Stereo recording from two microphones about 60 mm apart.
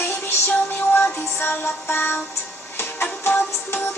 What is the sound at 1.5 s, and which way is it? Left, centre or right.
Music, left.